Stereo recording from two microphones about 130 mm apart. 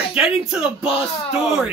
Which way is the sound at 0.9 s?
45° left (ahead or behind).